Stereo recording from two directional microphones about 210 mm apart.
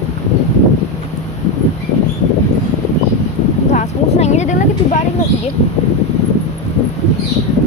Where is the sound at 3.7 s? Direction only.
35° left (ahead or behind).